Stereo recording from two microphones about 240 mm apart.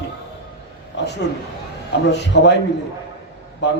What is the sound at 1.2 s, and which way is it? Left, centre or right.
A man's voice, left.